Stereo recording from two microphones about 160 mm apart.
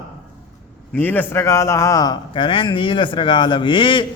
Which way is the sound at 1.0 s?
10° left (ahead or behind).